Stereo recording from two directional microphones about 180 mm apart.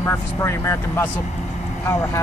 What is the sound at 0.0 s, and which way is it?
Speech, 15° left (ahead or behind).